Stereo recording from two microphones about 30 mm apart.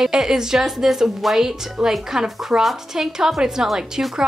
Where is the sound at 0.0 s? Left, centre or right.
Centre.